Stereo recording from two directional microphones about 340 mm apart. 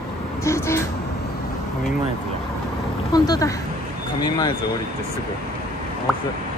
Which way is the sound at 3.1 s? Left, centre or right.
Centre.